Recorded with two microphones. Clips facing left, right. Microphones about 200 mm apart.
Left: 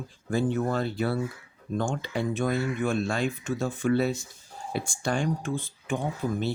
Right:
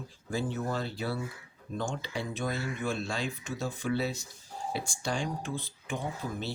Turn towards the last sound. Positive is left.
turn(degrees=55)  # may be behind; listen again after turning